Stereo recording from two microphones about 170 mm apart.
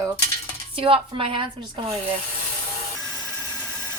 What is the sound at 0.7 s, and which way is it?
Speech, 30° right (ahead or behind).